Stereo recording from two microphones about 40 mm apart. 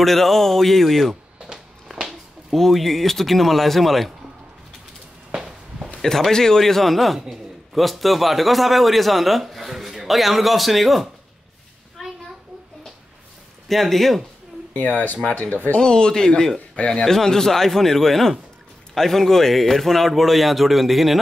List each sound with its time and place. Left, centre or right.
0.0 s a man's voice: centre
1.4 s a sound: centre
2.5 s a man's voice: centre
6.0 s a man's voice: centre
13.7 s a man's voice: centre
14.7 s speech: left
15.8 s speech: centre
16.5 s speech: left
17.0 s a man's voice: centre